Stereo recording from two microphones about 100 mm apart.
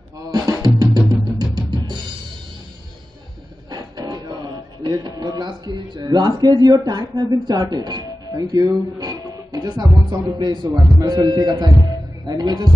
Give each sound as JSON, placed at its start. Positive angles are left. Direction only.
{"t": 0.2, "sound": "drum", "side_deg": -40}
{"t": 3.7, "sound": "music", "side_deg": -40}
{"t": 10.4, "sound": "a man's voice", "side_deg": -45}